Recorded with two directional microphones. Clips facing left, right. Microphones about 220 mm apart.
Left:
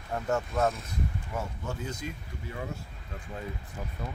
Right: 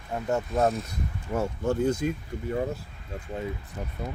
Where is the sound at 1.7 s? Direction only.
50° right (ahead or behind).